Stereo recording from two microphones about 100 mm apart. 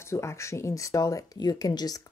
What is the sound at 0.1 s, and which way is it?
Speech, 30° left (ahead or behind).